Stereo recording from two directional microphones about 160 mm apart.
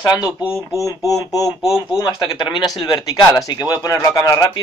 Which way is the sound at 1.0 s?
20° left (ahead or behind).